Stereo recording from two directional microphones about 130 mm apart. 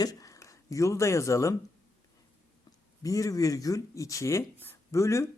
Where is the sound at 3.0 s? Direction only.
25° left (ahead or behind).